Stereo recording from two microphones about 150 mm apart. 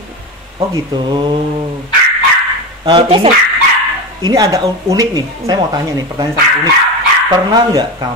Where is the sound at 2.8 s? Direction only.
35° right (ahead or behind).